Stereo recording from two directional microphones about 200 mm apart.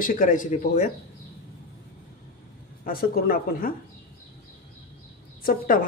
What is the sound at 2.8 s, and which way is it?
Speech, 45° left (ahead or behind).